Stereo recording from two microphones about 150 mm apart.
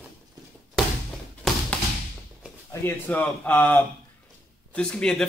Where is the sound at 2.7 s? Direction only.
15° left (ahead or behind).